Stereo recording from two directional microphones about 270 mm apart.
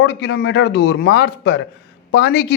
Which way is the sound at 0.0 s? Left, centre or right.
Left.